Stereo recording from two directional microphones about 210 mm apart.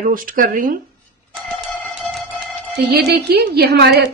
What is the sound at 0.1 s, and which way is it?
Speech, 40° right (ahead or behind).